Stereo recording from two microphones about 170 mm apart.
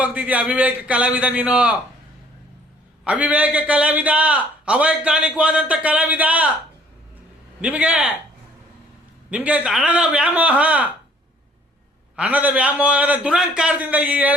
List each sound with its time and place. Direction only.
0.0 s a man's voice: 10° right (ahead or behind)
3.0 s a man's voice: 5° right (ahead or behind)
7.6 s a man's voice: 10° right (ahead or behind)
9.3 s a man's voice: 5° right (ahead or behind)
12.1 s a man's voice: 10° right (ahead or behind)